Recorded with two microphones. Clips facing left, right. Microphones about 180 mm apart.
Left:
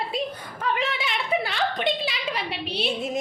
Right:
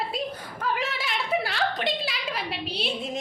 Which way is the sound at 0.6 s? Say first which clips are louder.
Left 2 dB; 5° right (ahead or behind).